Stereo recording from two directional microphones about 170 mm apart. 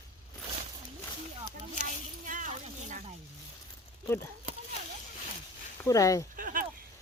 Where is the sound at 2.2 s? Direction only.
50° right (ahead or behind).